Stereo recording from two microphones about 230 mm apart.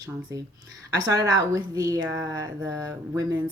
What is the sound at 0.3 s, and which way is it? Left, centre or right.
Speech, centre.